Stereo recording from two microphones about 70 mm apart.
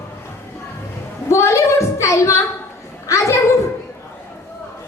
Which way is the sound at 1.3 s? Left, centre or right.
Left.